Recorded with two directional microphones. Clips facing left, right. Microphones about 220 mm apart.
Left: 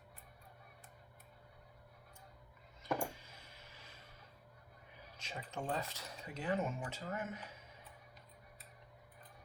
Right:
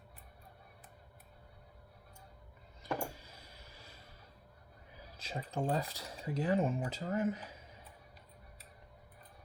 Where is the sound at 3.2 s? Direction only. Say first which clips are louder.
Right 2 dB; 35° right (ahead or behind).